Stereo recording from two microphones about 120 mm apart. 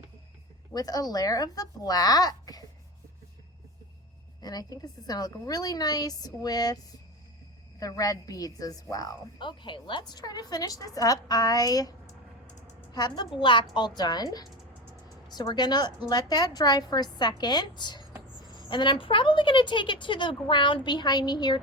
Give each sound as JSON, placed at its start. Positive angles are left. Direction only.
{"t": 0.7, "sound": "a woman's voice", "side_deg": 30}
{"t": 4.4, "sound": "a woman's voice", "side_deg": 35}
{"t": 7.8, "sound": "a woman's voice", "side_deg": 30}